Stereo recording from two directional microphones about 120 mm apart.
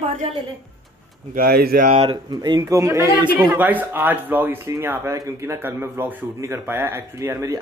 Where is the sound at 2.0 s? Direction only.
35° right (ahead or behind).